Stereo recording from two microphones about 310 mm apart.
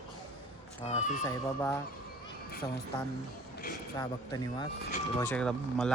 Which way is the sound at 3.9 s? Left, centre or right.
Centre.